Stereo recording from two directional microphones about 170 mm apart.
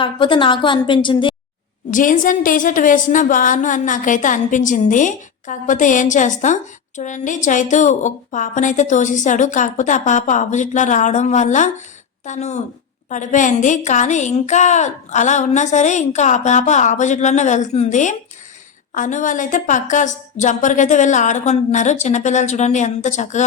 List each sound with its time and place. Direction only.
0.0 s a woman's voice: 30° left (ahead or behind)
1.9 s a woman's voice: 50° left (ahead or behind)